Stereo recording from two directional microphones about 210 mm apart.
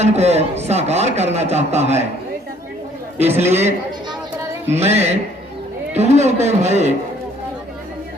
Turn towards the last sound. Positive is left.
turn(degrees=-30)  # may be behind; listen again after turning